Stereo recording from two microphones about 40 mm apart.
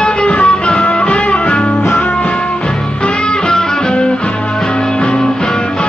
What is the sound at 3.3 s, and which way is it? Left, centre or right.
Music, centre.